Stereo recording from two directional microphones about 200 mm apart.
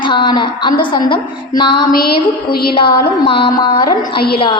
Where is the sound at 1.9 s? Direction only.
50° left (ahead or behind).